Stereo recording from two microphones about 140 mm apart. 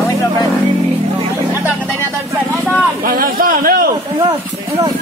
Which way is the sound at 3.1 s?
90° right.